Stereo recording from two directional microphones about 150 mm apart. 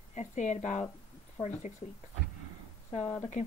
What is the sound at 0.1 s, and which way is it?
Speech, 50° left (ahead or behind).